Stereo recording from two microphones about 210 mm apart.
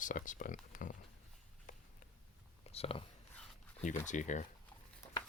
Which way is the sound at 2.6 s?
30° left (ahead or behind).